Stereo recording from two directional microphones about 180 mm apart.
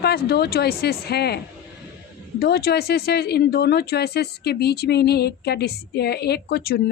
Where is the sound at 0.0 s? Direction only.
65° left (ahead or behind).